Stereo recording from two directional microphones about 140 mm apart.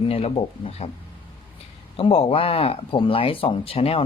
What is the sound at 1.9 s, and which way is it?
Speech, 40° left (ahead or behind).